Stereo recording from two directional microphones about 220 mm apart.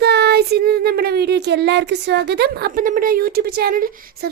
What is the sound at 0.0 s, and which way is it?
Child singing, 50° right (ahead or behind).